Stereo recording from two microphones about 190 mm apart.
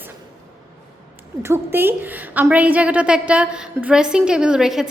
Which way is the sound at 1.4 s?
15° right (ahead or behind).